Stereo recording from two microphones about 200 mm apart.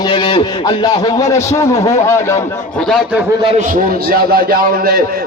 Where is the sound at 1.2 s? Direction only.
15° left (ahead or behind).